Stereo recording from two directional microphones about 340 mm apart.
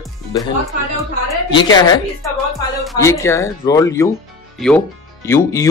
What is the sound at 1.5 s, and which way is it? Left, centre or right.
Speech, centre.